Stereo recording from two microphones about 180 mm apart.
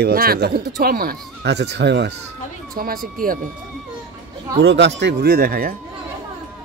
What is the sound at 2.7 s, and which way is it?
Speech, 55° right (ahead or behind).